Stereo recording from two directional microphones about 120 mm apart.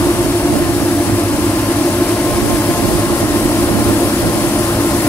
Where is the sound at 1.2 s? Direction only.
15° left (ahead or behind).